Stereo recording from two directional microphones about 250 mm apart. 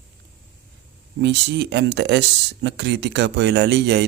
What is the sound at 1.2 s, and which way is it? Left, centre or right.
Speech, right.